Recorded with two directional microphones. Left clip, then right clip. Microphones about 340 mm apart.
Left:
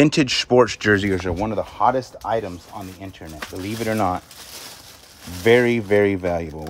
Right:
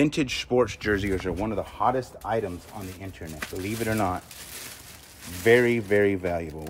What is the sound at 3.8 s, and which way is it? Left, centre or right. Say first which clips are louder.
Speech: left 6 dB; left.